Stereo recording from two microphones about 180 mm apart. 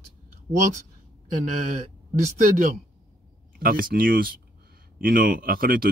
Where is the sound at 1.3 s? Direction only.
45° right (ahead or behind).